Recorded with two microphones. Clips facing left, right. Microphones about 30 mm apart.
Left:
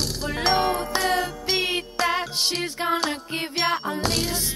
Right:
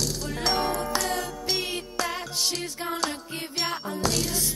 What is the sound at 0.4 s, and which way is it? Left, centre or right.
Music, left.